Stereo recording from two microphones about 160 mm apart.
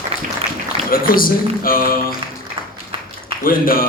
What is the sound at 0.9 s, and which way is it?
A man's voice, 65° left (ahead or behind).